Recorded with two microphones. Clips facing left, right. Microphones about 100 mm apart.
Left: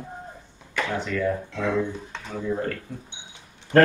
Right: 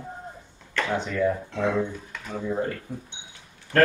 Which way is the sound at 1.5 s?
30° right (ahead or behind).